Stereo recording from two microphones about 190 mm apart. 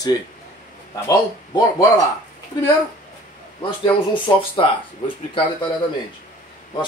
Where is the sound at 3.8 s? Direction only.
25° left (ahead or behind).